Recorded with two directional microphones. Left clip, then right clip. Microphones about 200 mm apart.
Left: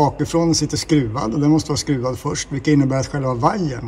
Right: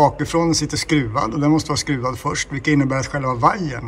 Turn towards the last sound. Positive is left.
turn(degrees=20)  # may be behind; listen again after turning